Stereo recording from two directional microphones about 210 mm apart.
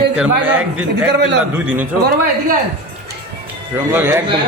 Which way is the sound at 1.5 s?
5° right (ahead or behind).